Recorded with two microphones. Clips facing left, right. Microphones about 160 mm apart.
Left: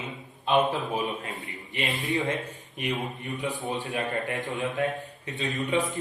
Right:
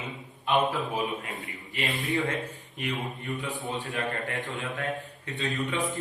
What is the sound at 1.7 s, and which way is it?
Speech, 20° left (ahead or behind).